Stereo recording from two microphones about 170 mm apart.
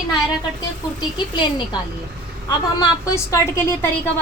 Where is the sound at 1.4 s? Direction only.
25° left (ahead or behind).